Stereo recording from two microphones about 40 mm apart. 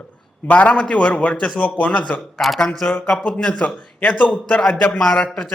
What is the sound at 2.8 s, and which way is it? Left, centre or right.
A man's voice, left.